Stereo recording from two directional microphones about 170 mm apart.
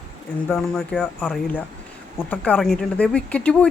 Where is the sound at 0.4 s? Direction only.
5° left (ahead or behind).